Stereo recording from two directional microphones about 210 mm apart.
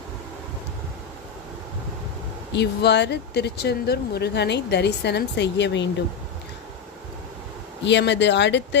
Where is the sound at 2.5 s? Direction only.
55° left (ahead or behind).